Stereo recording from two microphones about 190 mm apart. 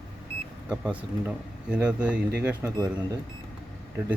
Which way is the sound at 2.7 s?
20° right (ahead or behind).